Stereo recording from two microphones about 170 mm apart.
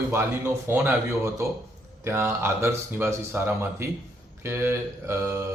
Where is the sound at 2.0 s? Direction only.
15° right (ahead or behind).